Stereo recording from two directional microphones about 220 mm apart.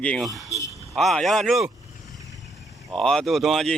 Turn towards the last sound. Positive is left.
turn(degrees=0)  # may be behind; listen again after turning